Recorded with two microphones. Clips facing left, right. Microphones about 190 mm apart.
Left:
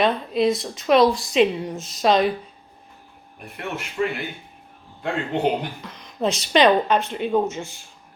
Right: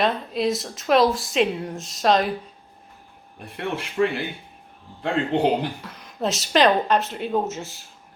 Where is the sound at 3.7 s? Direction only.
30° right (ahead or behind).